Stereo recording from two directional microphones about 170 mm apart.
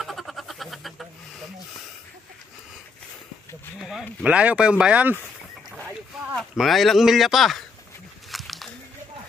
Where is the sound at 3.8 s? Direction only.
5° right (ahead or behind).